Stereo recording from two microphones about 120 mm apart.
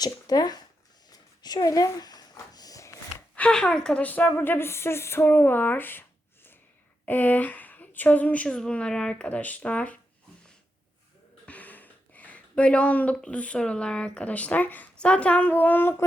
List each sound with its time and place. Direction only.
0.0 s speech: 35° left (ahead or behind)
1.1 s a sound: 35° left (ahead or behind)
3.3 s a woman's voice: 10° left (ahead or behind)
11.4 s speech: 15° left (ahead or behind)